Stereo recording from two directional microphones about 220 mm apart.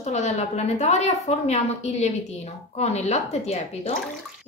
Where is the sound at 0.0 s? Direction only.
30° left (ahead or behind).